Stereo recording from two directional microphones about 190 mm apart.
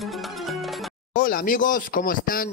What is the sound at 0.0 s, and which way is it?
Music, centre (ahead or behind).